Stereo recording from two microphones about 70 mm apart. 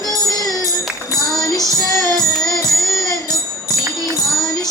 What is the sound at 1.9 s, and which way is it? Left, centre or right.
Music, right.